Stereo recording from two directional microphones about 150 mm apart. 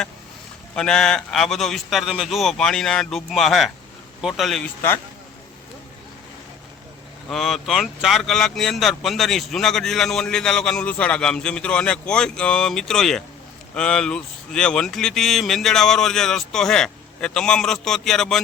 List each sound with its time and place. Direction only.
0.8 s speech: 5° left (ahead or behind)
7.3 s speech: centre (ahead or behind)